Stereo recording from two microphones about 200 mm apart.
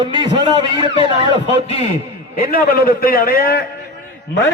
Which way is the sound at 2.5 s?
45° left (ahead or behind).